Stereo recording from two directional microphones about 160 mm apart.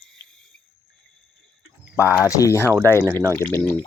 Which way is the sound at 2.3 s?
20° left (ahead or behind).